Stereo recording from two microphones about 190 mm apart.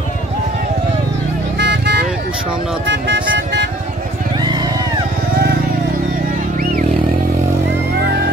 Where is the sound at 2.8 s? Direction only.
70° right (ahead or behind).